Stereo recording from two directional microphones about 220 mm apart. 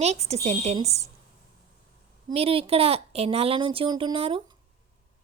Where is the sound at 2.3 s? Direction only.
25° right (ahead or behind).